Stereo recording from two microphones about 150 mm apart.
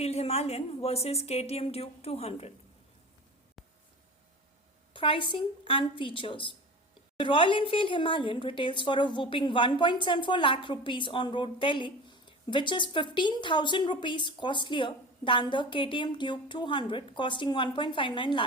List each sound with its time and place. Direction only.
0.0 s a woman's voice: 45° left (ahead or behind)
4.9 s a woman's voice: 35° left (ahead or behind)